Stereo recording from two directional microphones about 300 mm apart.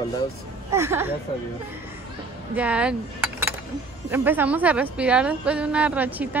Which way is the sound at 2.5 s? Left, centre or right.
Centre.